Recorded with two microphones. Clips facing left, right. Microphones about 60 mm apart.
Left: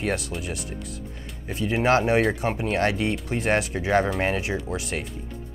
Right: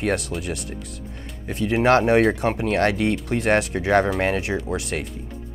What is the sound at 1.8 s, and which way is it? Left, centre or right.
Speech, right.